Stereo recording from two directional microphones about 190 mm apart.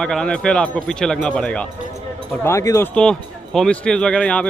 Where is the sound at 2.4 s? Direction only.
15° left (ahead or behind).